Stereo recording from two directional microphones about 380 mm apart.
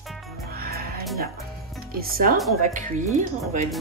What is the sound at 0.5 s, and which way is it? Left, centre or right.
Music, right.